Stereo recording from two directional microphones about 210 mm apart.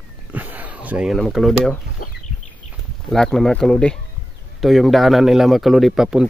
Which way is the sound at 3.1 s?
Centre (ahead or behind).